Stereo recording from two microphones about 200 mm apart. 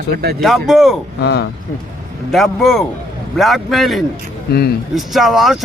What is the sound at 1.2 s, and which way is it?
Speech, 55° left (ahead or behind).